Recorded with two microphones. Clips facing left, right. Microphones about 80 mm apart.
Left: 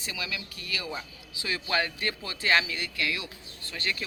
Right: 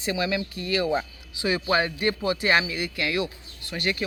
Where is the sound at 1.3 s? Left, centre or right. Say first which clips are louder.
Right 6 dB; centre.